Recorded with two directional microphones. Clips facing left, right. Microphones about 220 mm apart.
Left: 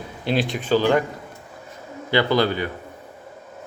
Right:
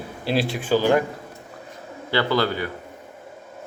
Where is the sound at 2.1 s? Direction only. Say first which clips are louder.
Left 2 dB; 15° left (ahead or behind).